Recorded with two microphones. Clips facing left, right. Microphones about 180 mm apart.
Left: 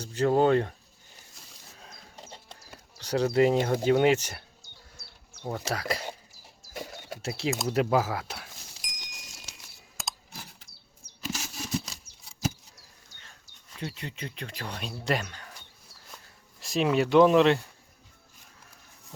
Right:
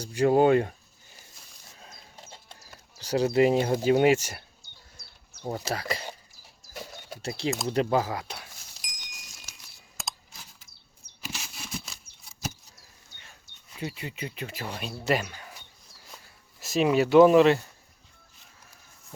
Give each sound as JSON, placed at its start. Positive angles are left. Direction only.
{"t": 0.0, "sound": "speech", "side_deg": -10}
{"t": 1.8, "sound": "a sound", "side_deg": 0}
{"t": 3.0, "sound": "speech", "side_deg": -10}
{"t": 7.2, "sound": "speech", "side_deg": 0}
{"t": 10.0, "sound": "a sound", "side_deg": 0}
{"t": 11.3, "sound": "patter", "side_deg": 40}
{"t": 13.7, "sound": "speech", "side_deg": -5}